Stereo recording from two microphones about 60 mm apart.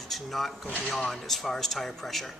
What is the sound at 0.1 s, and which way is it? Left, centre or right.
Speech, centre.